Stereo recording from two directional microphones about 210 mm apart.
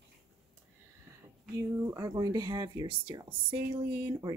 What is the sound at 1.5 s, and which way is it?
Speech, 15° right (ahead or behind).